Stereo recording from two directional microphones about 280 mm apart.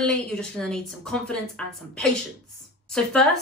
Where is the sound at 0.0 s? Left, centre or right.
Centre.